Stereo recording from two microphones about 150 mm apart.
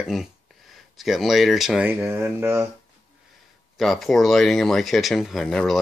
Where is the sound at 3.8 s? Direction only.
Centre (ahead or behind).